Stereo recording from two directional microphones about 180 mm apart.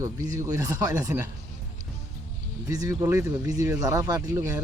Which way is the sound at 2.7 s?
20° right (ahead or behind).